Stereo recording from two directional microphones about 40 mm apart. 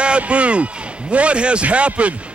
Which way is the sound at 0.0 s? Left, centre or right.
Right.